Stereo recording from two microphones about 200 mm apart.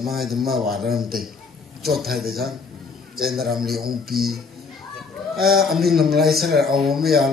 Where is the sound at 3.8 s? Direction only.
50° right (ahead or behind).